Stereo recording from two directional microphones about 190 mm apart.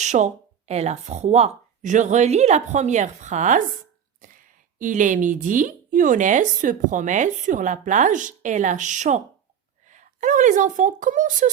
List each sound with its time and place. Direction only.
0.0 s a woman's voice: 40° right (ahead or behind)